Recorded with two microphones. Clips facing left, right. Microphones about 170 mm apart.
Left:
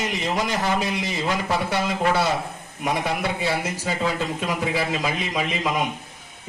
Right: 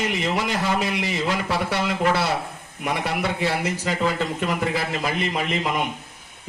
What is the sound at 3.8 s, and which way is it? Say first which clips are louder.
A man's voice: even; 65° right (ahead or behind).